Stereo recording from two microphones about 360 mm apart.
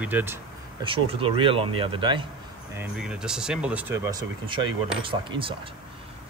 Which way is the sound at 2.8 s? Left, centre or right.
Centre.